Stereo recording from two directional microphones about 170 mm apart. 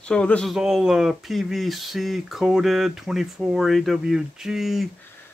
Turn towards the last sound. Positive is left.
turn(degrees=0)  # may be behind; listen again after turning